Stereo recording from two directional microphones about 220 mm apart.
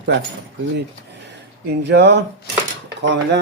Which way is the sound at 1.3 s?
50° right (ahead or behind).